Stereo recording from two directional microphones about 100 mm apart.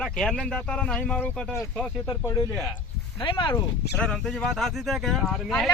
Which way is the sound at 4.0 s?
10° left (ahead or behind).